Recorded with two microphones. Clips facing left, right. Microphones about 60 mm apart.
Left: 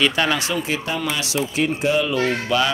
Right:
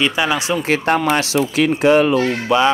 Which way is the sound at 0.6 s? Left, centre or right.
Right.